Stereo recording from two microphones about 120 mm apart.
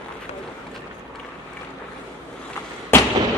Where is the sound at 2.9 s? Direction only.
20° left (ahead or behind).